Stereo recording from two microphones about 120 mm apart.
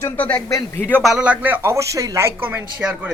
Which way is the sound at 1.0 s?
5° right (ahead or behind).